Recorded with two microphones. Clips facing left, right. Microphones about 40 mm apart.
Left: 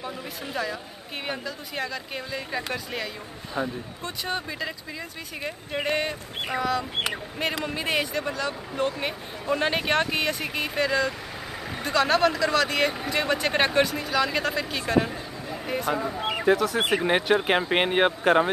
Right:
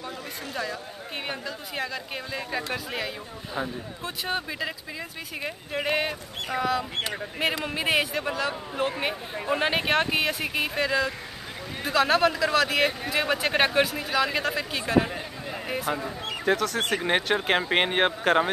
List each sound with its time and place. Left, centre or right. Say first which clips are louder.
1.2 s speech: left 3 dB; centre
5.9 s speech: even; centre
16.0 s a sound: left 5 dB; centre
16.5 s speech: left 3 dB; centre
17.0 s speech: left 2 dB; centre